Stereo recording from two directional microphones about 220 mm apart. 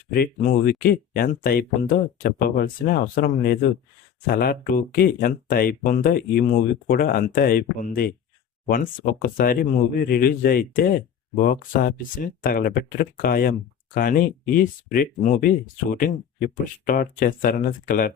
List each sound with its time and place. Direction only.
0.1 s speech: 40° left (ahead or behind)